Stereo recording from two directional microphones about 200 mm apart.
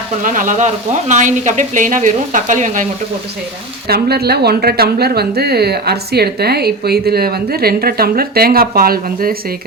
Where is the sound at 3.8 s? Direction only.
50° right (ahead or behind).